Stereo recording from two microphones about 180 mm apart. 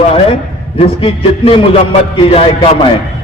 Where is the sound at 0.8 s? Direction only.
30° left (ahead or behind).